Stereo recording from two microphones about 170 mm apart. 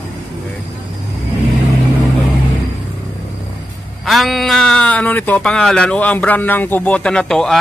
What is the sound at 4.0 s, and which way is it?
Speech, centre (ahead or behind).